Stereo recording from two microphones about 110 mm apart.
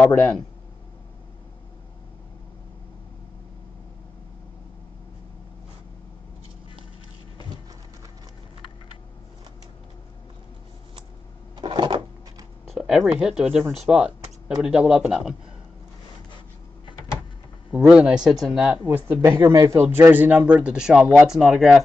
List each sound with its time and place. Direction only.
0.1 s speech: 10° left (ahead or behind)
11.5 s a sound: 45° right (ahead or behind)
12.6 s a sound: 5° right (ahead or behind)
13.2 s speech: 5° right (ahead or behind)
17.6 s speech: 10° right (ahead or behind)
18.7 s speech: 15° right (ahead or behind)
19.2 s speech: 30° right (ahead or behind); by 21.8 s centre (ahead or behind)